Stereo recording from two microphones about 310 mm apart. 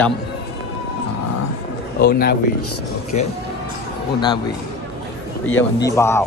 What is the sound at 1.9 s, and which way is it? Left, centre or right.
Speech, left.